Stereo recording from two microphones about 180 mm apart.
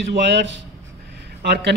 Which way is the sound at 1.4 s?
65° right (ahead or behind).